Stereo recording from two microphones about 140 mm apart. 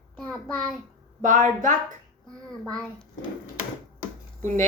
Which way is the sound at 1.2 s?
65° right (ahead or behind).